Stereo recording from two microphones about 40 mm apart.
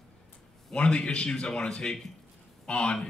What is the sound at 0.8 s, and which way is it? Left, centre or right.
Speech, left.